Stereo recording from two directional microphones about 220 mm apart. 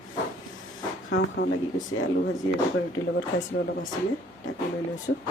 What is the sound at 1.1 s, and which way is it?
Speech, 55° left (ahead or behind).